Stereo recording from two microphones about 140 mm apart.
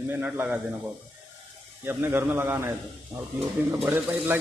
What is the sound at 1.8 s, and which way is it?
Speech, 15° right (ahead or behind).